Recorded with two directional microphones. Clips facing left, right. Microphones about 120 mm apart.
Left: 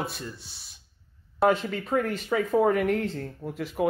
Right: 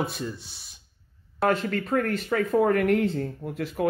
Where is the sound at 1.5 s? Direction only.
10° left (ahead or behind).